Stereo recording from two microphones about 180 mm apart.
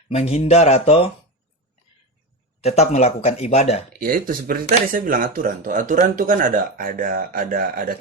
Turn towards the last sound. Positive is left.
turn(degrees=-55)  # may be behind; listen again after turning